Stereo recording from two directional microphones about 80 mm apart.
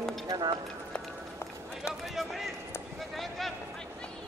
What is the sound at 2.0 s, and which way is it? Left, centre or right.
Speech, centre.